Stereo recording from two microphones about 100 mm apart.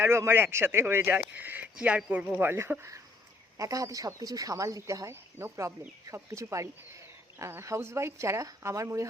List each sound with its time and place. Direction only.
0.0 s speech: 25° right (ahead or behind)
3.6 s speech: 35° right (ahead or behind)